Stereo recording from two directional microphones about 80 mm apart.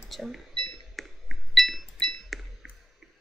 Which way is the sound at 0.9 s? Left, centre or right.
Centre.